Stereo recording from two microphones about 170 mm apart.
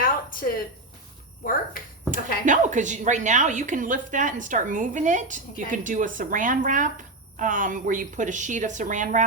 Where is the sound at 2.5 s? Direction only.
45° right (ahead or behind).